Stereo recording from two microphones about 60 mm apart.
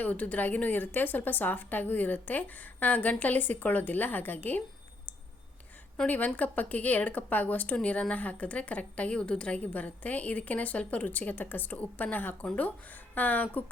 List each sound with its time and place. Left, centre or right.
0.0 s speech: left
6.1 s speech: left